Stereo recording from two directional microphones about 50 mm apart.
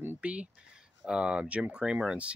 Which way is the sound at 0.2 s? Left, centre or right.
Right.